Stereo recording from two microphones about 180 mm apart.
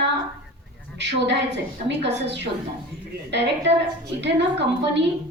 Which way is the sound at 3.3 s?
75° right (ahead or behind).